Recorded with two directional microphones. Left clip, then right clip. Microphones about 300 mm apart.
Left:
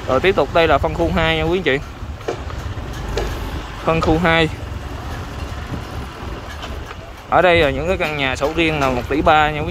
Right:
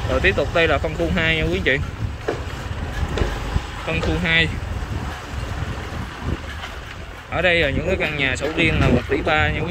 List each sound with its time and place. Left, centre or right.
0.2 s speech: centre
3.8 s speech: centre
7.3 s speech: centre